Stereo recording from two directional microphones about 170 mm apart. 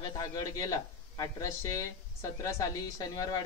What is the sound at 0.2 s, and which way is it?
Speech, 20° left (ahead or behind).